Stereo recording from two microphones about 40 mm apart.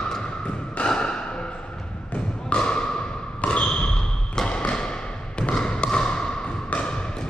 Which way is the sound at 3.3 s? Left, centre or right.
Left.